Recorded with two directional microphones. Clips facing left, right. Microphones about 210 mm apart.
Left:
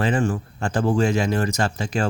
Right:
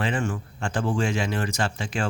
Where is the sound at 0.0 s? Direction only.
40° left (ahead or behind).